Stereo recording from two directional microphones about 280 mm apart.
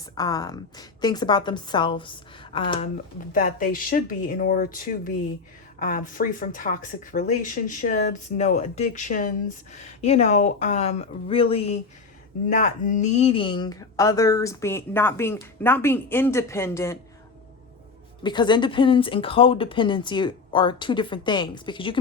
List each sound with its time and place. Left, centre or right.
0.2 s speech: centre
3.3 s speech: left; by 17.0 s centre
18.2 s speech: centre